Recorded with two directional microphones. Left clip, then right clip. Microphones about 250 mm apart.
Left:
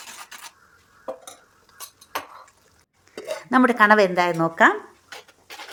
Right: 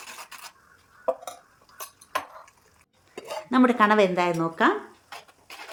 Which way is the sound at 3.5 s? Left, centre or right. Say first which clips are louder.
Left 4 dB; left.